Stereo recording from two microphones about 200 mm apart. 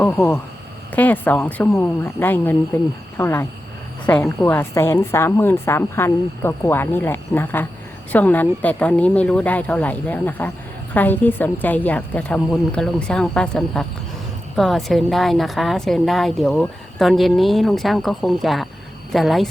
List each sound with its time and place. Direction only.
0.0 s a woman's voice: 10° left (ahead or behind)